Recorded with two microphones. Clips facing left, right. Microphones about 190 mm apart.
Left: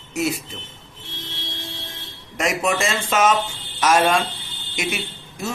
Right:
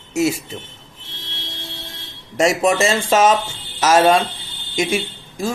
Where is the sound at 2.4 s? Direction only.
30° right (ahead or behind).